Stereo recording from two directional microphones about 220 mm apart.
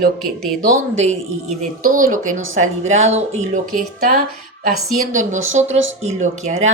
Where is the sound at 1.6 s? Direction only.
35° right (ahead or behind).